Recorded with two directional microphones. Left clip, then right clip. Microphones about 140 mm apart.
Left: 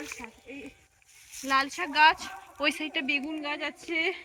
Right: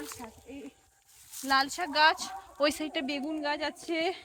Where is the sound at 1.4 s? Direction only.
55° right (ahead or behind); by 4.2 s 90° right.